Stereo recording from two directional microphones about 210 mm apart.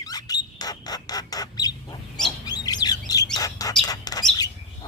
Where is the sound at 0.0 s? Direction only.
20° left (ahead or behind).